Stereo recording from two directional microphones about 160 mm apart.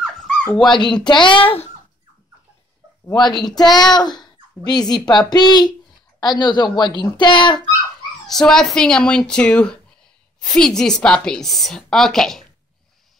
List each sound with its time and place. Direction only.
0.0 s dog: centre (ahead or behind)
0.7 s speech: 30° left (ahead or behind)
3.1 s speech: 25° left (ahead or behind)
8.3 s a woman's voice: 5° left (ahead or behind)